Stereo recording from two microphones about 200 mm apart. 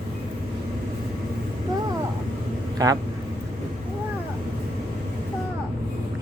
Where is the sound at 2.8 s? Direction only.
20° right (ahead or behind).